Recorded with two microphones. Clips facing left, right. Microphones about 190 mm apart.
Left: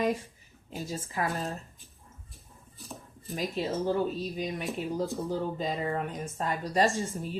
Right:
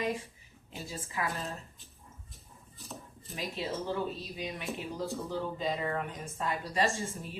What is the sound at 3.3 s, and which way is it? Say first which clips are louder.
A woman's voice: left 5 dB; 45° left (ahead or behind).